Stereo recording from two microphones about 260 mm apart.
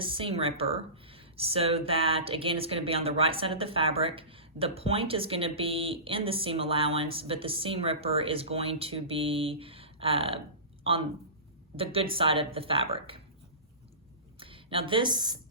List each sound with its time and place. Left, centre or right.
0.0 s speech: centre
11.8 s speech: right
14.3 s a woman's voice: right